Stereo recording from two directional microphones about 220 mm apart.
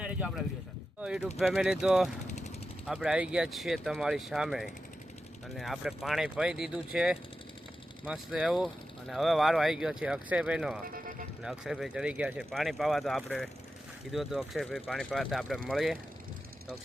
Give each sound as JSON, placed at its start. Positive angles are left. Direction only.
{"t": 0.0, "sound": "a sound", "side_deg": -5}
{"t": 1.0, "sound": "speech", "side_deg": -5}
{"t": 2.2, "sound": "vehicle", "side_deg": 30}
{"t": 2.8, "sound": "speech", "side_deg": 0}
{"t": 10.8, "sound": "vehicle", "side_deg": -40}
{"t": 11.4, "sound": "speech", "side_deg": 0}